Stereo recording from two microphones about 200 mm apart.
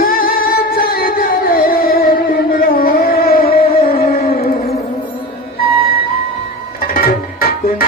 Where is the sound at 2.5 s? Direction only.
45° left (ahead or behind).